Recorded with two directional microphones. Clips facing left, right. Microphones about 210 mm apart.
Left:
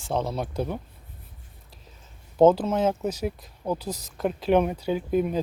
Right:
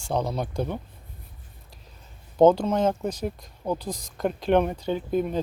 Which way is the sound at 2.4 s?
5° left (ahead or behind).